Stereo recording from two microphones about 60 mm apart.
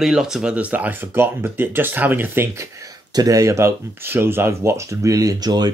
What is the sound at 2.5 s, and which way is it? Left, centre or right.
Speech, right.